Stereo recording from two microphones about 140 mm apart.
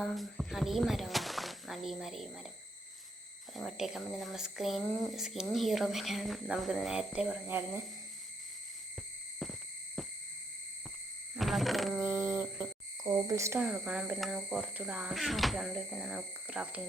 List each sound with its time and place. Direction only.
0.0 s speech: centre (ahead or behind)
3.5 s speech: centre (ahead or behind)
9.4 s owl: centre (ahead or behind)
11.3 s frog: centre (ahead or behind)
11.9 s a sound: 15° right (ahead or behind)
13.1 s speech: 20° right (ahead or behind)
13.6 s speech: 10° right (ahead or behind)